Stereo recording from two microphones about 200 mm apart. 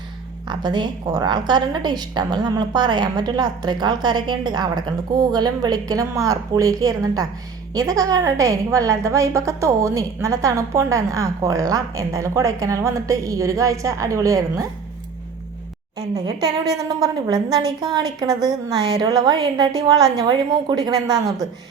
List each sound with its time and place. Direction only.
0.4 s a woman's voice: 20° right (ahead or behind)
16.0 s a woman's voice: 20° right (ahead or behind)